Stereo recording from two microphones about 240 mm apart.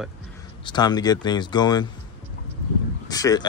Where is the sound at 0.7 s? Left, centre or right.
Centre.